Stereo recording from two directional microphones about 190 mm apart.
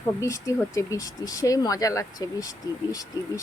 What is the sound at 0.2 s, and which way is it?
Speech, 15° left (ahead or behind).